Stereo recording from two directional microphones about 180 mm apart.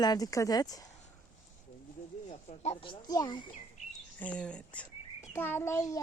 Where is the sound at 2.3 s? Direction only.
35° left (ahead or behind).